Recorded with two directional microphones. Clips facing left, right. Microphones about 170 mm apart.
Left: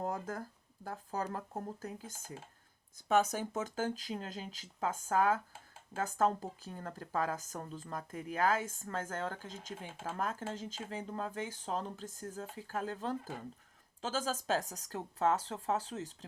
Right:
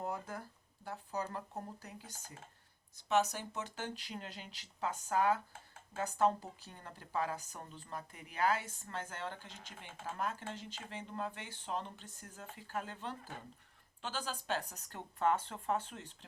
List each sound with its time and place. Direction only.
0.0 s a sound: 40° left (ahead or behind)
0.9 s speech: 45° left (ahead or behind)
3.1 s speech: 50° left (ahead or behind)